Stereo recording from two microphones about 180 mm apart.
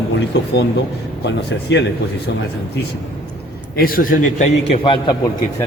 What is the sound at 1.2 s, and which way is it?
Speech, 75° left (ahead or behind).